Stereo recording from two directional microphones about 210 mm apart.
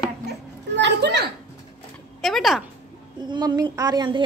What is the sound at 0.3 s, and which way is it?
Children playing, 55° right (ahead or behind).